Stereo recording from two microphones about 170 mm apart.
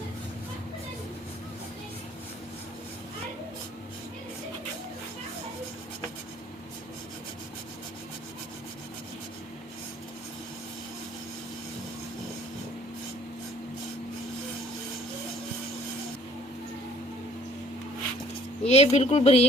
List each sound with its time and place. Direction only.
18.6 s speech: 40° left (ahead or behind)